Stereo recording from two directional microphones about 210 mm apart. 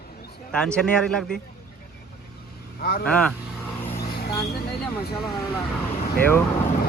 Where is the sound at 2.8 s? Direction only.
45° left (ahead or behind).